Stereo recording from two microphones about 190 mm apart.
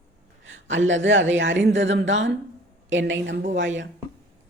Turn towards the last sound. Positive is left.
turn(degrees=-75)  # may be behind; listen again after turning